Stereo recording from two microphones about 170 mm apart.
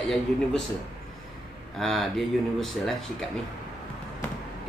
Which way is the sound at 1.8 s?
Centre (ahead or behind).